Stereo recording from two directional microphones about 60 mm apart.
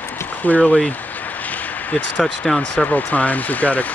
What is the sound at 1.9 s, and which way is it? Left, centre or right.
Speech, left.